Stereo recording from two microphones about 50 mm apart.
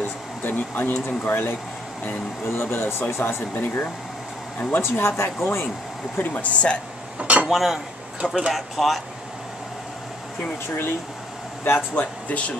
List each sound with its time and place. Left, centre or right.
0.4 s speech: left
4.6 s speech: left
4.8 s speech: left
6.1 s speech: left
6.5 s speech: left
7.2 s dishes: right
7.5 s speech: centre
11.6 s speech: left